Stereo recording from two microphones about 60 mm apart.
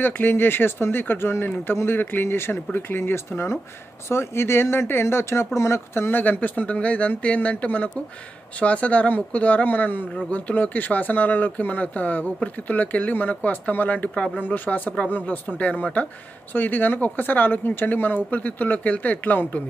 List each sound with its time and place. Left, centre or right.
0.0 s speech: left